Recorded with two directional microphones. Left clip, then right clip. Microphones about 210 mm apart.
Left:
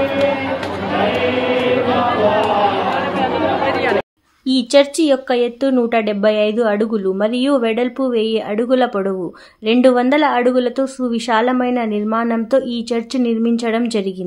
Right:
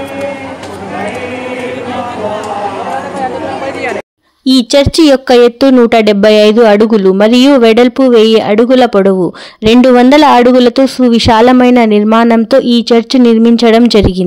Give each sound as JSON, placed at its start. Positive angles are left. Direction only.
{"t": 4.5, "sound": "speech", "side_deg": -40}